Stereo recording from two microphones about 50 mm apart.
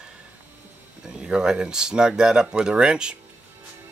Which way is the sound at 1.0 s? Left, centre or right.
Centre.